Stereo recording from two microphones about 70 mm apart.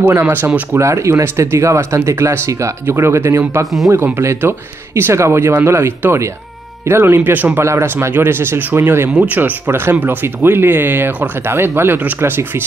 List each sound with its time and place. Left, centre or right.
0.0 s speech: right
0.7 s speech: right